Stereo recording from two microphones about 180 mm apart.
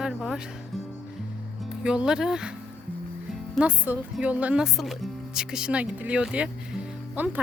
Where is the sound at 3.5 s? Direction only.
5° right (ahead or behind).